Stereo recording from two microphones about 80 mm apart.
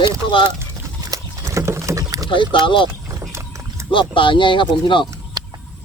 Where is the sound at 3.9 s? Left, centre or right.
Left.